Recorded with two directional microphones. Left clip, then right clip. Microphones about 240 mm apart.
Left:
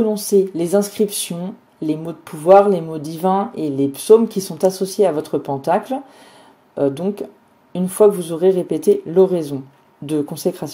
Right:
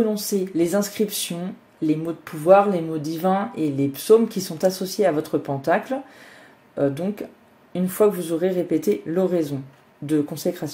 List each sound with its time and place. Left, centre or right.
0.0 s speech: left